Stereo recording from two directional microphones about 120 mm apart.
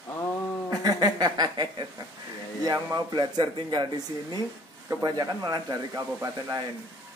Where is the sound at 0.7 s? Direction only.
30° right (ahead or behind).